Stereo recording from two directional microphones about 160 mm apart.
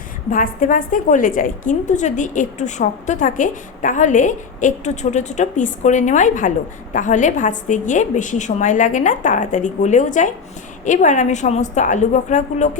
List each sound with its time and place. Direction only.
0.3 s a woman's voice: 60° left (ahead or behind)